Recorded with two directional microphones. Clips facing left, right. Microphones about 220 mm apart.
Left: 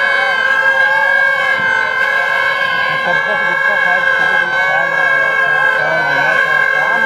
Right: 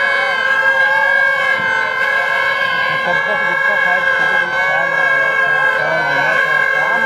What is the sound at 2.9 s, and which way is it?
Emergency vehicle, 15° right (ahead or behind).